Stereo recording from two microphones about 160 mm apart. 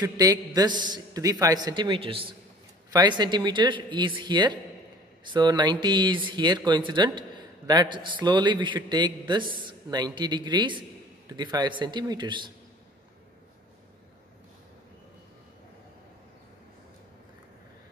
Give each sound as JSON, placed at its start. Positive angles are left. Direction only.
{"t": 0.2, "sound": "speech", "side_deg": -25}
{"t": 9.4, "sound": "speech", "side_deg": -60}
{"t": 9.7, "sound": "speech", "side_deg": -25}